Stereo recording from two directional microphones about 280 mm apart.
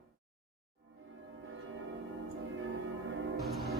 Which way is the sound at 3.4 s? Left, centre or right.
Centre.